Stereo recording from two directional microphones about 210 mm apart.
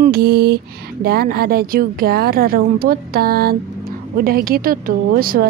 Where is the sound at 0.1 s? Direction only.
50° right (ahead or behind).